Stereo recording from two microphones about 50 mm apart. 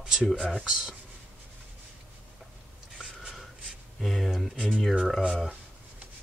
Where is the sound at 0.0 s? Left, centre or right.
Centre.